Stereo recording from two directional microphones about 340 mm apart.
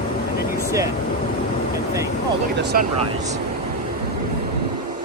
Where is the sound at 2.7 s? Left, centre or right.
Right.